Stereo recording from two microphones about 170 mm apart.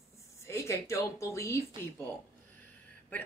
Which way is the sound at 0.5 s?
15° left (ahead or behind).